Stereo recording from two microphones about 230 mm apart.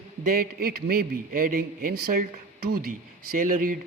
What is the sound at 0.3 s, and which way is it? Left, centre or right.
A man's voice, right.